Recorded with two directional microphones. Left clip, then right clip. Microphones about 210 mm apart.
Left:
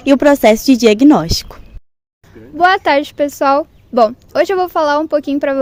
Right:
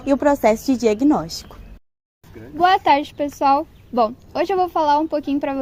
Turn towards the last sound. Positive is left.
turn(degrees=45)  # may be behind; listen again after turning